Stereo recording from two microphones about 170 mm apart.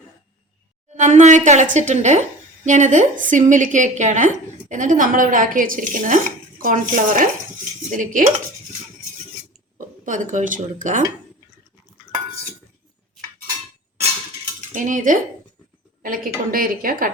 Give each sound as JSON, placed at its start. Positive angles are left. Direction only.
{"t": 0.9, "sound": "a woman's voice", "side_deg": -45}
{"t": 9.7, "sound": "speech", "side_deg": -50}
{"t": 14.7, "sound": "cutlery", "side_deg": -50}
{"t": 16.0, "sound": "a woman's voice", "side_deg": -55}